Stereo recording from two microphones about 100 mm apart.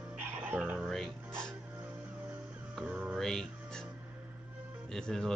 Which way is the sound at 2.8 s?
10° right (ahead or behind).